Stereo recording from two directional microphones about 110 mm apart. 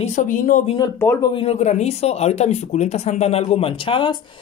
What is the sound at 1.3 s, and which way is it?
Speech, 55° left (ahead or behind).